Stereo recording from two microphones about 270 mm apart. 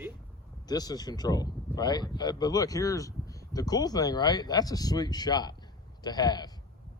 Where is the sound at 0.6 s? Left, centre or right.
Centre.